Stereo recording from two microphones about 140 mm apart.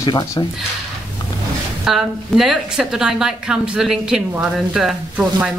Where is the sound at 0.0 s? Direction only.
30° left (ahead or behind).